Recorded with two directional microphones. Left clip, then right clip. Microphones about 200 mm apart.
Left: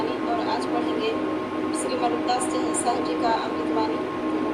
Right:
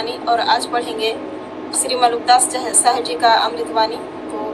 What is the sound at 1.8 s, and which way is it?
A woman's voice, 40° right (ahead or behind).